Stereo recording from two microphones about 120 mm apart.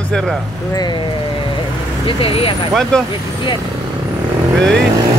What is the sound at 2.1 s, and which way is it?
Speech, 50° left (ahead or behind).